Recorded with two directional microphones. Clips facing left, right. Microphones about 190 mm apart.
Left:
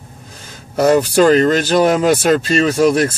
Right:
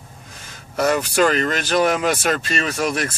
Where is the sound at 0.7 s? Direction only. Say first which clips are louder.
Left 7 dB; 35° left (ahead or behind).